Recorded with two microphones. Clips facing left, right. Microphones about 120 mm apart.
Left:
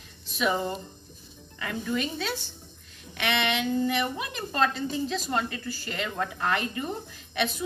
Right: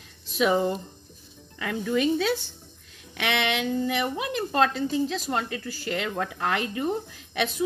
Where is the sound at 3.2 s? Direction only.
90° right.